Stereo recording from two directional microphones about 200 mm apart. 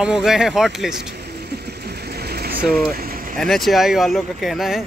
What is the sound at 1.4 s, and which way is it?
Vehicle, 55° right (ahead or behind).